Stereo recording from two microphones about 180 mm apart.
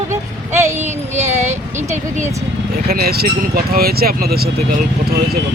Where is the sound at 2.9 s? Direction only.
60° right (ahead or behind).